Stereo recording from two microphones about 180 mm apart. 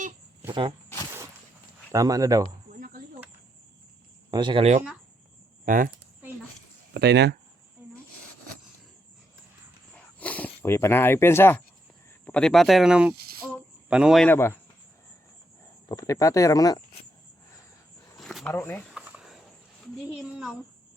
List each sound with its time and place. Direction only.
0.4 s speech: 25° right (ahead or behind)
1.9 s speech: 20° right (ahead or behind)
2.7 s a sound: 50° right (ahead or behind)
4.3 s speech: 25° right (ahead or behind)
5.6 s speech: 50° right (ahead or behind)
6.9 s speech: 70° right (ahead or behind)
10.2 s speech: 10° left (ahead or behind)
13.1 s a sound: 60° right (ahead or behind)
13.8 s speech: 5° right (ahead or behind)
14.3 s speech: 10° left (ahead or behind)
15.9 s speech: 20° left (ahead or behind)
18.2 s a sound: centre (ahead or behind)
18.5 s speech: 15° left (ahead or behind)
18.9 s a sound: 5° right (ahead or behind)